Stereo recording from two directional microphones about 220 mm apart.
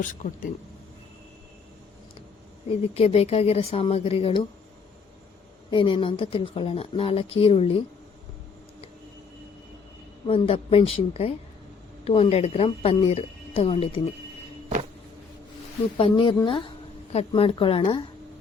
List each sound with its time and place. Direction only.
0.0 s speech: 35° left (ahead or behind)
2.8 s speech: 30° left (ahead or behind)
5.7 s speech: 25° left (ahead or behind)
10.2 s speech: 25° left (ahead or behind)
16.0 s speech: 25° left (ahead or behind)